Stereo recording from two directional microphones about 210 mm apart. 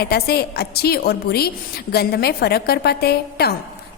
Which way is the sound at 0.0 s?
50° left (ahead or behind).